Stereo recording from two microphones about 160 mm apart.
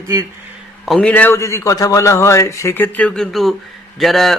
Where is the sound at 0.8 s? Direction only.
5° left (ahead or behind).